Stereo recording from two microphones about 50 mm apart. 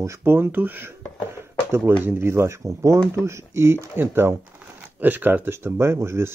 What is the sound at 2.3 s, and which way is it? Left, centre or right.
Speech, right.